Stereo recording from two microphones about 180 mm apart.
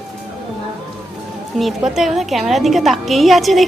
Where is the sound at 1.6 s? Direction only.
Centre (ahead or behind).